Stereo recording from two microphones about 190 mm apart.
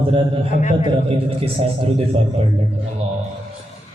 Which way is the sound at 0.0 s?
30° right (ahead or behind).